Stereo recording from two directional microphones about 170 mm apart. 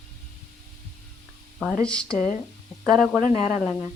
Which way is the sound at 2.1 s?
45° left (ahead or behind).